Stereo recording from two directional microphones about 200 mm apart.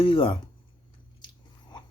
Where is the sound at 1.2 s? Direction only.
20° left (ahead or behind).